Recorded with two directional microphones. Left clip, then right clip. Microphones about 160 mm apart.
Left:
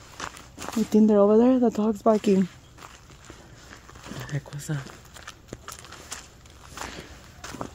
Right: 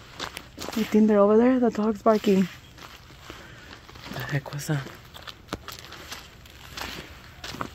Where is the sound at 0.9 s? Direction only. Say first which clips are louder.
Even; 25° left (ahead or behind).